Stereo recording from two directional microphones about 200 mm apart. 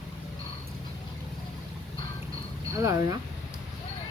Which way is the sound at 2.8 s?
15° right (ahead or behind).